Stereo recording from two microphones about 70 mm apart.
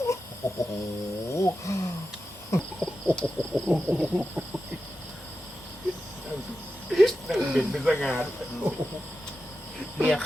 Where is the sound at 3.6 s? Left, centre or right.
Centre.